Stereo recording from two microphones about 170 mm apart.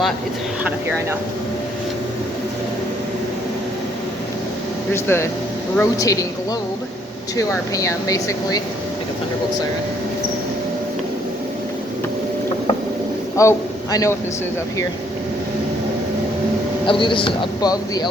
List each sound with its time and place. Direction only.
4.9 s a man's voice: 15° left (ahead or behind)
7.3 s a man's voice: 20° left (ahead or behind)
13.3 s a man's voice: 20° left (ahead or behind)
16.8 s a man's voice: 30° left (ahead or behind)